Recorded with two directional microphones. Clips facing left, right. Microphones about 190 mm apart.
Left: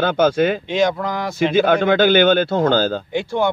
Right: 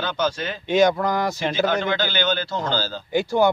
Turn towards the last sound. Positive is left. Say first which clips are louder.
# right 1 dB
turn(degrees=0)  # may be behind; listen again after turning